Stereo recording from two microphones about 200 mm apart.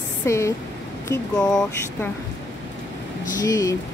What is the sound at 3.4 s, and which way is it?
Speech, 15° left (ahead or behind).